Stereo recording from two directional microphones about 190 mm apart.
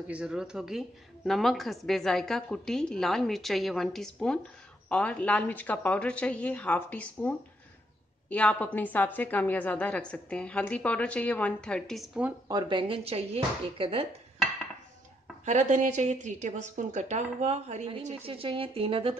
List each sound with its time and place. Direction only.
0.1 s a woman's voice: 5° right (ahead or behind)
12.4 s speech: 25° right (ahead or behind)
15.4 s a woman's voice: 40° right (ahead or behind)